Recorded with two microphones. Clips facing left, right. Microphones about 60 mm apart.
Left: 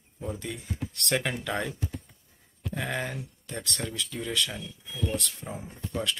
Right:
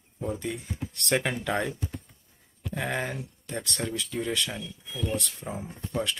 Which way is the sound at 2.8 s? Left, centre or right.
Centre.